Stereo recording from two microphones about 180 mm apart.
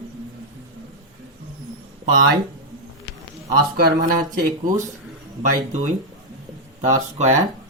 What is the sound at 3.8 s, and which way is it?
Speech, 50° right (ahead or behind).